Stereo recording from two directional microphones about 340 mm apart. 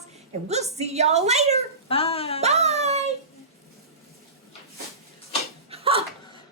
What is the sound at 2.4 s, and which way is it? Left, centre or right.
Speech, centre.